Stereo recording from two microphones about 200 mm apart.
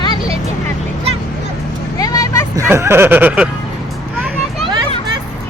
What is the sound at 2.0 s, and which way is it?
Vehicle, 15° left (ahead or behind).